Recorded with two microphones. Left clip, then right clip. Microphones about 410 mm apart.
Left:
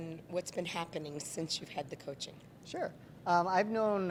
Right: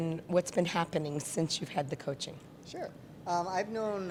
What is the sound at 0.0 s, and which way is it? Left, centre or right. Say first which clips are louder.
A woman's voice: right 8 dB; right.